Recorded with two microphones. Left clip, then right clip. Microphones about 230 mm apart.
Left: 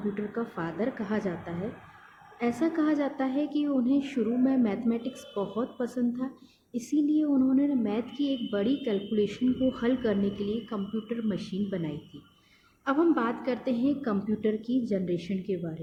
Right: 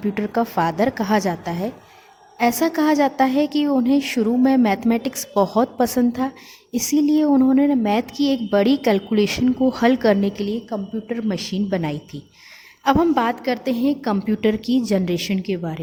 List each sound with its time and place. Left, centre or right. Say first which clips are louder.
0.1 s a woman's voice: right 12 dB; right